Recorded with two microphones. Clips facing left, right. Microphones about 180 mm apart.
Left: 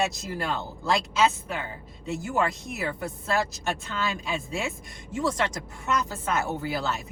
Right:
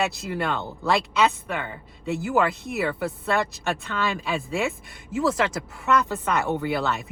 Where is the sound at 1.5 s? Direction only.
60° right (ahead or behind).